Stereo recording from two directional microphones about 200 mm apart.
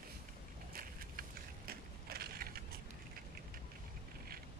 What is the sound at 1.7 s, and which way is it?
Crushing, 50° right (ahead or behind).